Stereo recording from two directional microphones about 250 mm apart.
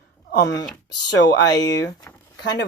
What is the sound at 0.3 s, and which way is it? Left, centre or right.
Speech, left.